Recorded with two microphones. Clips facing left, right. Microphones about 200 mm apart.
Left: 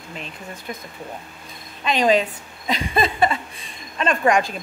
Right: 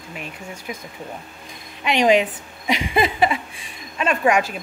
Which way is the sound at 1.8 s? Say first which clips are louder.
Right 2 dB; 15° right (ahead or behind).